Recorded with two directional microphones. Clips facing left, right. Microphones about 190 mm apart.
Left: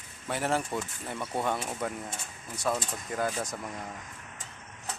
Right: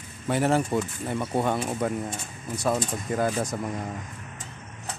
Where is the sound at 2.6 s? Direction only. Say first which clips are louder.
Right 5 dB; 30° right (ahead or behind).